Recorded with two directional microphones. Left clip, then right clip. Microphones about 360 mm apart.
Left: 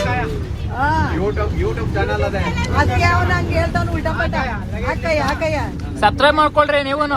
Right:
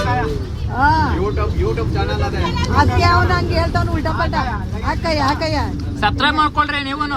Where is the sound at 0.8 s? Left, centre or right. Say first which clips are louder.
Right 3 dB; right.